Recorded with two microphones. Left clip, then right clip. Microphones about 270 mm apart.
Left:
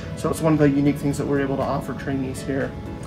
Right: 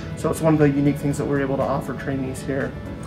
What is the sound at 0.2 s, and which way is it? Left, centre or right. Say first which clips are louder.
Speech: right 1 dB; centre.